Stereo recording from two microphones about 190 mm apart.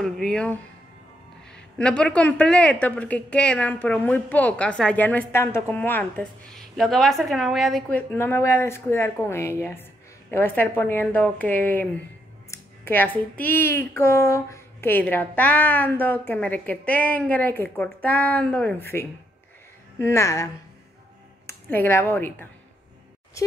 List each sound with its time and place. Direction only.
0.0 s a woman's voice: 5° left (ahead or behind)
12.4 s a sound: 10° left (ahead or behind)
13.4 s a woman's voice: 10° left (ahead or behind)
21.5 s speech: 10° left (ahead or behind)